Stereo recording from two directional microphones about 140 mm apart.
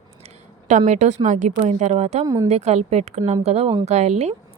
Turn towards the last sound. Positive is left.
turn(degrees=-50)  # may be behind; listen again after turning